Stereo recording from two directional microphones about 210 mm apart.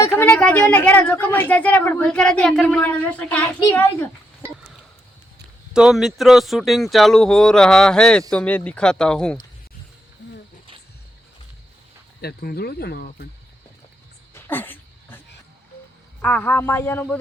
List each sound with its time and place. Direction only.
0.0 s a woman's voice: 15° left (ahead or behind)
3.6 s a child's voice: 20° left (ahead or behind)
5.7 s speech: centre (ahead or behind)
10.2 s a sound: 55° left (ahead or behind)
12.2 s speech: 45° left (ahead or behind)
14.3 s dog: 10° left (ahead or behind)
16.2 s a woman's voice: 10° left (ahead or behind)